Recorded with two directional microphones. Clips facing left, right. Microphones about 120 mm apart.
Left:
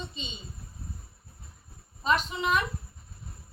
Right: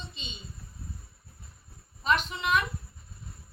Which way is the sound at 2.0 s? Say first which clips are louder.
Left 1 dB; 30° left (ahead or behind).